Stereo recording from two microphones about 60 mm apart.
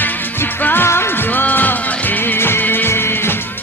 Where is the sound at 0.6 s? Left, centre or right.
Left.